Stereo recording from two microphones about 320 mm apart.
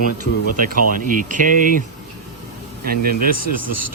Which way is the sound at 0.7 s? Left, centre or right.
Right.